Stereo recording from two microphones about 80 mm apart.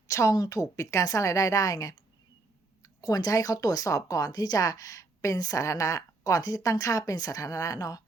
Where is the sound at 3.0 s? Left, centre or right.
Left.